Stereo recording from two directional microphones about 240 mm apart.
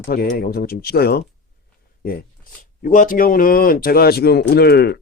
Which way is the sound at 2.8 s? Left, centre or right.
Left.